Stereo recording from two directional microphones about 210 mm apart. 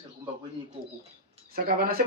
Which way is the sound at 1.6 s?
45° right (ahead or behind).